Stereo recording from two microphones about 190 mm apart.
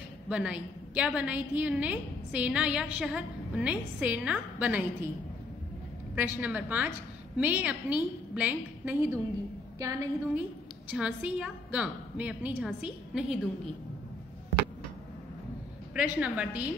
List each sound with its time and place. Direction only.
0.3 s a woman's voice: 5° right (ahead or behind)
6.1 s a woman's voice: 10° right (ahead or behind)
10.9 s a woman's voice: 5° right (ahead or behind)
15.9 s a woman's voice: 5° right (ahead or behind)